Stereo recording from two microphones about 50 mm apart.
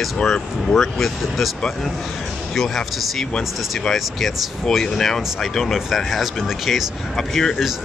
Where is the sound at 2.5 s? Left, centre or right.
Centre.